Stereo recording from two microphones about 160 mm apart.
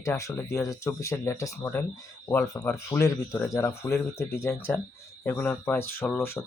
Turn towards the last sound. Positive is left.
turn(degrees=15)  # may be behind; listen again after turning